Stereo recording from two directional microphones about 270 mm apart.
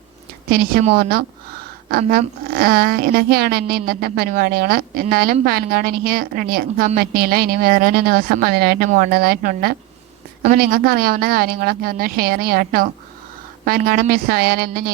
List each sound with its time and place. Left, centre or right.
0.5 s a woman's voice: right